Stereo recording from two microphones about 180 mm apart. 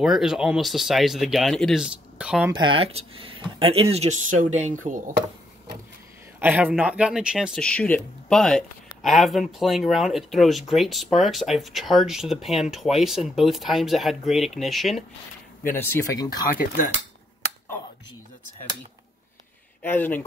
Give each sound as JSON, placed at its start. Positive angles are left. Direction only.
{"t": 0.0, "sound": "speech", "side_deg": 0}
{"t": 2.6, "sound": "speech", "side_deg": -30}
{"t": 6.4, "sound": "speech", "side_deg": -10}
{"t": 15.6, "sound": "speech", "side_deg": 10}
{"t": 19.8, "sound": "speech", "side_deg": 10}